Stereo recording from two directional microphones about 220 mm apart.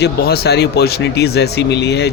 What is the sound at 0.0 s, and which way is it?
Speech, 45° left (ahead or behind).